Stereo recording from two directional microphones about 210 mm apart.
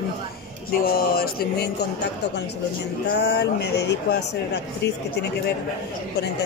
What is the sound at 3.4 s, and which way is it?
Speech, 50° left (ahead or behind).